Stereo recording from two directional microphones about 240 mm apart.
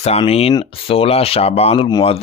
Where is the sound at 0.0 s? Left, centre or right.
Left.